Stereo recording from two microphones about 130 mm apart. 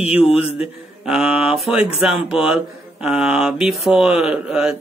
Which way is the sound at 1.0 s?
5° right (ahead or behind).